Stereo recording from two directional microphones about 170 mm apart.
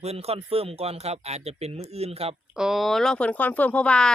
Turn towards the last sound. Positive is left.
turn(degrees=5)  # may be behind; listen again after turning